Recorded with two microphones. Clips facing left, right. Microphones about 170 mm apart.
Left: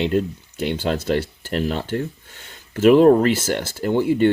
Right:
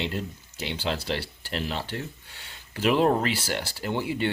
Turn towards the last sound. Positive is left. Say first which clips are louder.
# left 10 dB
turn(degrees=45)  # may be behind; listen again after turning